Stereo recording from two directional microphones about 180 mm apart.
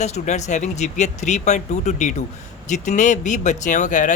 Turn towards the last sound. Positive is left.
turn(degrees=45)  # may be behind; listen again after turning